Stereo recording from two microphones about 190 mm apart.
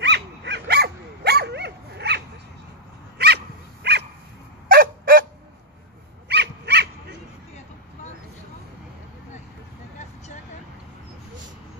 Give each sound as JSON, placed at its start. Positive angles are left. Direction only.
{"t": 0.0, "sound": "dog", "side_deg": -65}
{"t": 4.6, "sound": "a sound", "side_deg": -50}
{"t": 6.2, "sound": "dog", "side_deg": -65}